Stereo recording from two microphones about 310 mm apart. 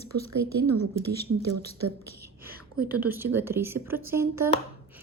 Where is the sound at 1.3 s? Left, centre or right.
Right.